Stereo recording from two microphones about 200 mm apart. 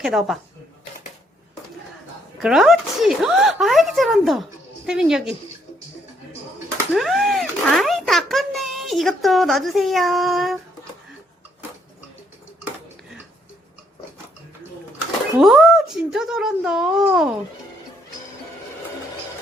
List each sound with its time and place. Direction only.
0.0 s speech: centre (ahead or behind)
2.4 s speech: centre (ahead or behind)
6.9 s a child's voice: centre (ahead or behind)
15.4 s speech: centre (ahead or behind)